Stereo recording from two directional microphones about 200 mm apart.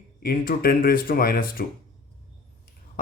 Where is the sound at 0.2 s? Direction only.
45° left (ahead or behind).